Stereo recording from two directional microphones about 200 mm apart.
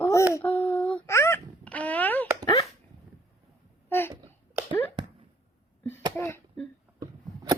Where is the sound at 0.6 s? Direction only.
25° left (ahead or behind).